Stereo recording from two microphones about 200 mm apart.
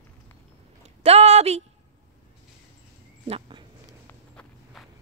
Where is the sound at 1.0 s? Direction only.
30° right (ahead or behind).